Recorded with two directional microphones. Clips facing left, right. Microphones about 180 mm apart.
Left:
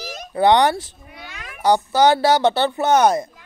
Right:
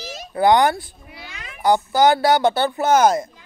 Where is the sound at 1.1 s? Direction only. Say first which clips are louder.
Left 1 dB; centre (ahead or behind).